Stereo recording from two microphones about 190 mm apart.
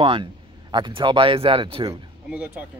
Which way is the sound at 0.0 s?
25° right (ahead or behind).